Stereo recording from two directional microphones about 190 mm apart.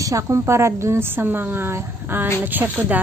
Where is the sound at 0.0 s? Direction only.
15° right (ahead or behind).